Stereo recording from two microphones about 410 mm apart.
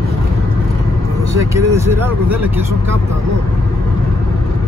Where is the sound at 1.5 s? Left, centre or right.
Centre.